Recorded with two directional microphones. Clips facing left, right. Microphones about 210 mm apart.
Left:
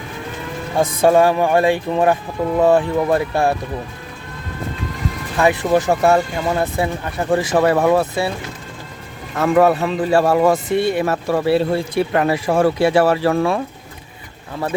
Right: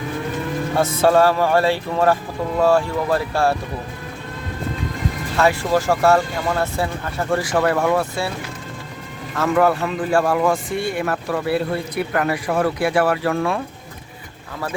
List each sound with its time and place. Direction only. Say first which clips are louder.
0.8 s speech: left 2 dB; 15° left (ahead or behind)
5.4 s speech: left 2 dB; 20° left (ahead or behind)
9.4 s speech: left 3 dB; 25° left (ahead or behind)